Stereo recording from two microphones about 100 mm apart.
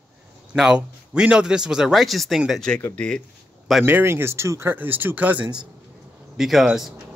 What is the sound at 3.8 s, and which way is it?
Speech, 20° right (ahead or behind).